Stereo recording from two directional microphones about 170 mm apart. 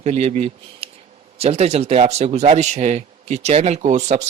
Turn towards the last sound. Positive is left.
turn(degrees=-40)  # may be behind; listen again after turning